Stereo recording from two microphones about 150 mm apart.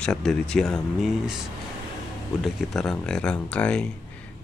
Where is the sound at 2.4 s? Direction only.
Centre (ahead or behind).